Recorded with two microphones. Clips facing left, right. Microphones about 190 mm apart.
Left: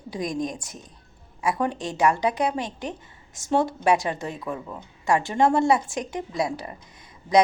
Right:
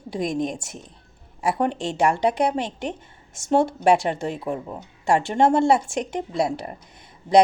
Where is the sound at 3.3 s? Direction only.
25° right (ahead or behind).